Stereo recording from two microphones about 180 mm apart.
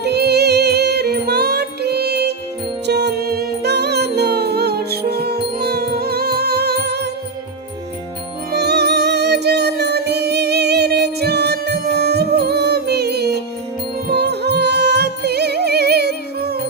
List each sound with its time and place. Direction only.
0.0 s music: 65° right (ahead or behind)
8.5 s music: 65° right (ahead or behind)